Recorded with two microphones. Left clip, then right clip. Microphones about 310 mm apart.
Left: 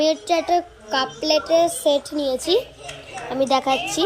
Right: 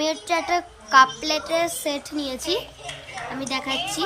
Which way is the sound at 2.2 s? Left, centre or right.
Centre.